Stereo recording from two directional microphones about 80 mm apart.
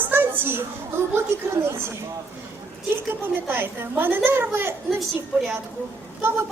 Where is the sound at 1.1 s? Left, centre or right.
Right.